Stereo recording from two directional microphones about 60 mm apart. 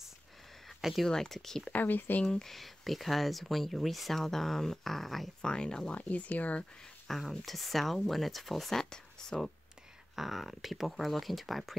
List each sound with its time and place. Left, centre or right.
0.7 s a sound: centre
1.0 s speech: centre
1.7 s speech: left
2.2 s speech: centre
5.5 s speech: centre
7.1 s speech: centre
10.1 s speech: centre